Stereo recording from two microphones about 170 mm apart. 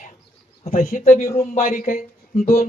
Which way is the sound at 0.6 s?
40° left (ahead or behind).